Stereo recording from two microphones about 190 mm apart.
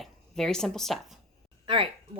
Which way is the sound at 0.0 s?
Centre (ahead or behind).